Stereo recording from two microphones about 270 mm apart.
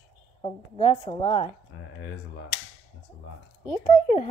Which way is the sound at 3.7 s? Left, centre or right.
Left.